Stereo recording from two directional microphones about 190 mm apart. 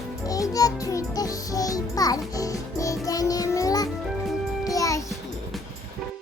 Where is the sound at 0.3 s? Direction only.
20° left (ahead or behind).